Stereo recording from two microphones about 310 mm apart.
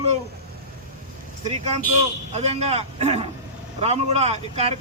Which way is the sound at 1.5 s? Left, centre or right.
Right.